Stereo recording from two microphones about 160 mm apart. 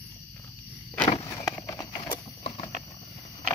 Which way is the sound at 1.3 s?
20° left (ahead or behind).